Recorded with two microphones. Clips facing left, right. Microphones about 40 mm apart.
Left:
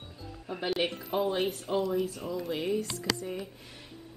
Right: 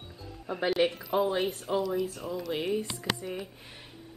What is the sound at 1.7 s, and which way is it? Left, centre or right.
Speech, left.